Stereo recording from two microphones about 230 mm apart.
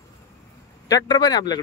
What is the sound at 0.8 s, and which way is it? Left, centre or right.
Speech, centre.